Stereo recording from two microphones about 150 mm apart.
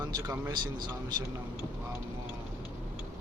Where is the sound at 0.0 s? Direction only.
25° right (ahead or behind).